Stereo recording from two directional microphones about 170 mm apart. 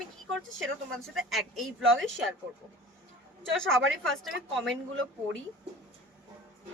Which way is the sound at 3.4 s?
5° left (ahead or behind).